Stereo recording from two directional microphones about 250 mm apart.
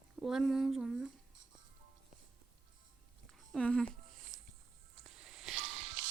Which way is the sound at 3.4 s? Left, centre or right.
Centre.